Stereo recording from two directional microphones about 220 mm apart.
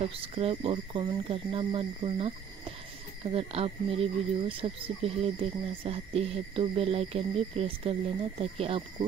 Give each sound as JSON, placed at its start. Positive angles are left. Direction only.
{"t": 0.0, "sound": "speech", "side_deg": -25}